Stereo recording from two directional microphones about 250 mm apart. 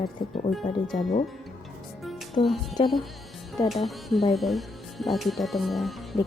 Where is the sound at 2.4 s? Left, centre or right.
Centre.